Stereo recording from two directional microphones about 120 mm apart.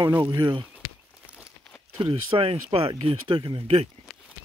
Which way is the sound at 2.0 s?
50° right (ahead or behind).